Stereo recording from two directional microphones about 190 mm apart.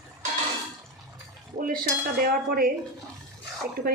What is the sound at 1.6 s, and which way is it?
Cutlery, 50° right (ahead or behind).